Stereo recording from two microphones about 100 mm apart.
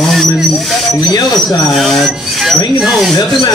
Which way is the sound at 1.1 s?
40° left (ahead or behind).